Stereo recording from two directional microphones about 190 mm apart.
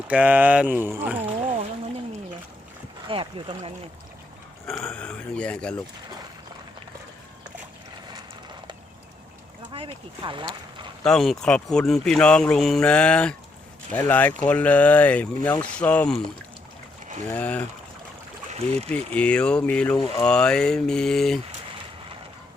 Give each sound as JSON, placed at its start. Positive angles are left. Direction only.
{"t": 0.1, "sound": "speech", "side_deg": -10}
{"t": 3.1, "sound": "speech", "side_deg": -25}
{"t": 4.6, "sound": "speech", "side_deg": 5}
{"t": 9.7, "sound": "speech", "side_deg": -25}
{"t": 11.0, "sound": "speech", "side_deg": 0}
{"t": 17.2, "sound": "speech", "side_deg": 10}
{"t": 18.5, "sound": "speech", "side_deg": -35}
{"t": 18.9, "sound": "speech", "side_deg": 5}